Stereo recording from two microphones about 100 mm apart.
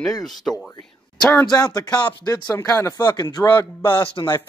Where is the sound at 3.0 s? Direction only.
45° left (ahead or behind).